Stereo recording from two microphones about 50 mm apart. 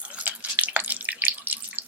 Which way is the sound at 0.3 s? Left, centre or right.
Right.